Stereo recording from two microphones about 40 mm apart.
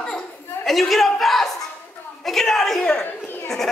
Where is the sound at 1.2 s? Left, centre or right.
Centre.